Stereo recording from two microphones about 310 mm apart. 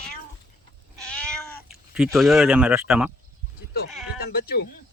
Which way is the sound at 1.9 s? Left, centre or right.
Centre.